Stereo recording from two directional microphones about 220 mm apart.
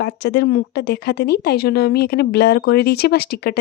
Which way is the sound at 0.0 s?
50° left (ahead or behind).